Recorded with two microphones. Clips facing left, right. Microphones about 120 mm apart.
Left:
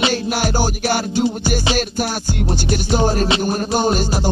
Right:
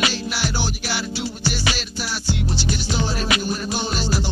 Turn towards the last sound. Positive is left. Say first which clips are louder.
# left 8 dB
turn(degrees=50)  # may be behind; listen again after turning